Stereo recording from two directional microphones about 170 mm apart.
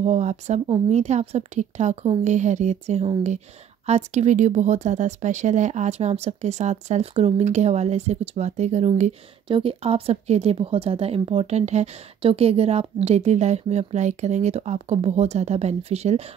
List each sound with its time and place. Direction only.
0.0 s speech: 40° right (ahead or behind)